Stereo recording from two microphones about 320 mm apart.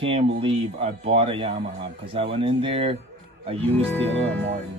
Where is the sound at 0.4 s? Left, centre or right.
Centre.